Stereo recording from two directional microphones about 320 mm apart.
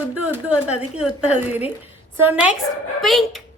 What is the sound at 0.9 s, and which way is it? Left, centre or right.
A woman's voice, centre.